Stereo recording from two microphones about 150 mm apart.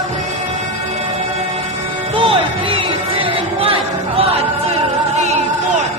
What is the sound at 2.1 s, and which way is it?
Music, 35° right (ahead or behind).